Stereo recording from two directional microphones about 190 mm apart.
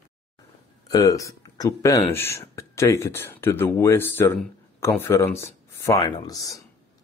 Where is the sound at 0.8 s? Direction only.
20° left (ahead or behind).